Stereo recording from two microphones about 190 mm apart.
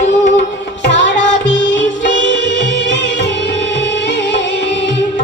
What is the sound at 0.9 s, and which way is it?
Music, 65° left (ahead or behind).